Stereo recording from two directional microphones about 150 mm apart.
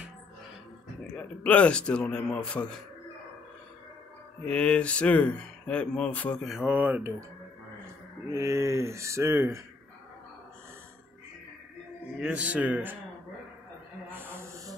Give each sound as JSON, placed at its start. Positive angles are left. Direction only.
{"t": 1.1, "sound": "speech", "side_deg": 10}
{"t": 4.5, "sound": "speech", "side_deg": 10}
{"t": 6.4, "sound": "speech", "side_deg": -5}
{"t": 8.3, "sound": "speech", "side_deg": -20}
{"t": 12.2, "sound": "speech", "side_deg": -10}
{"t": 14.1, "sound": "a sound", "side_deg": -15}